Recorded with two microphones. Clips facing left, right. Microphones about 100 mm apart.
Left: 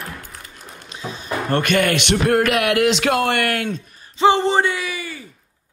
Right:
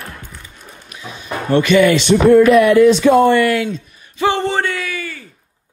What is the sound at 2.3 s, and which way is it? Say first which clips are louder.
Speech: right 10 dB; 70° left (ahead or behind).